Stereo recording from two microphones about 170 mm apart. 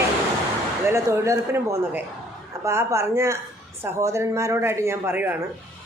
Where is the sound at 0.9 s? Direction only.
15° right (ahead or behind).